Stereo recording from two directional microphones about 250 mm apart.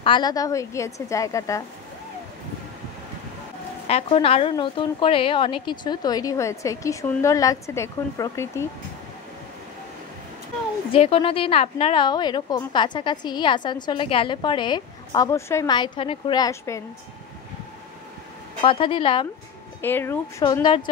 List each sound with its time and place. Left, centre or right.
0.0 s a woman's voice: centre
3.8 s a woman's voice: left
10.9 s a woman's voice: left
18.6 s a woman's voice: left
19.8 s a woman's voice: centre